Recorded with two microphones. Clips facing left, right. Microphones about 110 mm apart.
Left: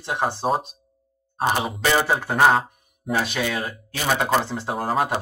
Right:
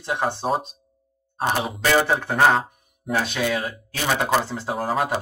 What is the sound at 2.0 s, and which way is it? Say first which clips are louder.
Speech: even; 5° left (ahead or behind).